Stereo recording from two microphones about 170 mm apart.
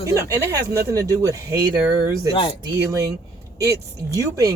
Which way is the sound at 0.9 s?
20° right (ahead or behind).